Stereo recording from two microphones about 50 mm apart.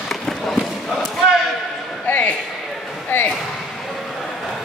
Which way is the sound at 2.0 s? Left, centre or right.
Left.